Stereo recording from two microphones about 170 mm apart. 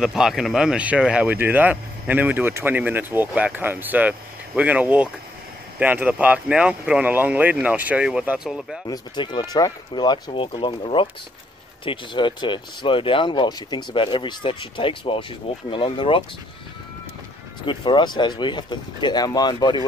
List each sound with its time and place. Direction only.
0.0 s speech: centre (ahead or behind)
8.8 s speech: 25° left (ahead or behind)
17.6 s speech: 30° left (ahead or behind)